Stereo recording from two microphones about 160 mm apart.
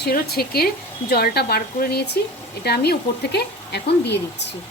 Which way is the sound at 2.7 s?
90° left.